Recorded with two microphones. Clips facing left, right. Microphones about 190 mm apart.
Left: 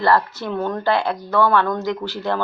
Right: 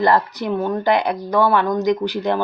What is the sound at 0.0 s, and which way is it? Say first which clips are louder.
Speech: right 1 dB; 20° right (ahead or behind).